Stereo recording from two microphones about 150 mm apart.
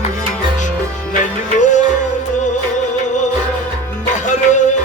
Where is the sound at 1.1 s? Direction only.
55° left (ahead or behind).